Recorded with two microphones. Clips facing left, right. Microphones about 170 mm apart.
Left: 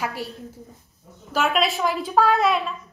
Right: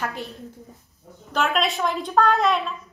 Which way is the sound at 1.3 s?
5° left (ahead or behind).